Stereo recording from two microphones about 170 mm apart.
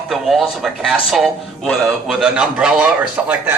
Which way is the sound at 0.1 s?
Centre (ahead or behind).